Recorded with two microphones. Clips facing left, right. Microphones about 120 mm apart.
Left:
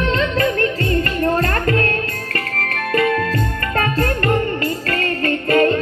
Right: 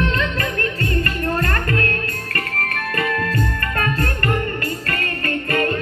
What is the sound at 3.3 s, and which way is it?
Music, 30° left (ahead or behind).